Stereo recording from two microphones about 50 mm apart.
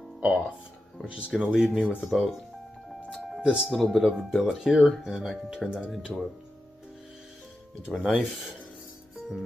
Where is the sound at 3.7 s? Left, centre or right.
Centre.